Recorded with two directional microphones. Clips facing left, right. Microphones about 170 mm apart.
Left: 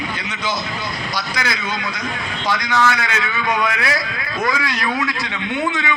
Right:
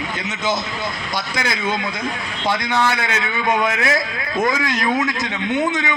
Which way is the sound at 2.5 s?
25° right (ahead or behind).